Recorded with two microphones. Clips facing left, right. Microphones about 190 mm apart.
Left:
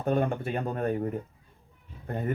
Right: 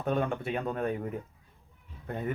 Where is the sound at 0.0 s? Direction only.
45° left (ahead or behind).